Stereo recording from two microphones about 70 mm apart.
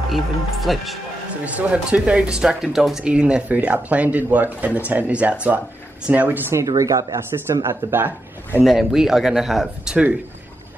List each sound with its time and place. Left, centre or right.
0.1 s a man's voice: centre
1.4 s speech: centre
6.8 s speech: right
7.6 s speech: right
8.6 s a man's voice: centre